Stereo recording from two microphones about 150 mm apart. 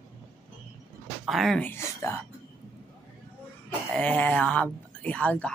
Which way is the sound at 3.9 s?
10° left (ahead or behind).